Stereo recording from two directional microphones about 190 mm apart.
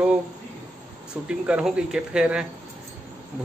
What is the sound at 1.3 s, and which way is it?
Speech, 5° right (ahead or behind).